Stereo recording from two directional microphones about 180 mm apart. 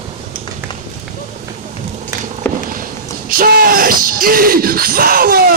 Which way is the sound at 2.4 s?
10° left (ahead or behind).